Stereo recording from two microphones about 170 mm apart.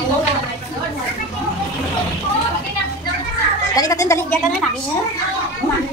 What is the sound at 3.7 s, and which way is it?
Speech, 20° left (ahead or behind).